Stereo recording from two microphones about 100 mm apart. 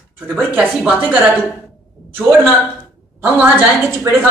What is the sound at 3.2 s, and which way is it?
Speech, 20° right (ahead or behind).